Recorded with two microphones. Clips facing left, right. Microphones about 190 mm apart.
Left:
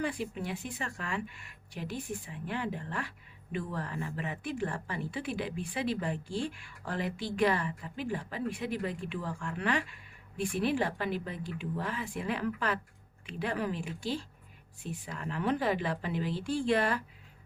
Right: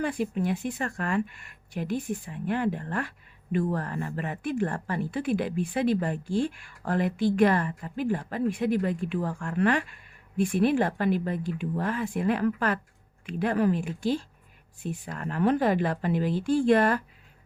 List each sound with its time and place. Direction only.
0.0 s a woman's voice: 50° right (ahead or behind)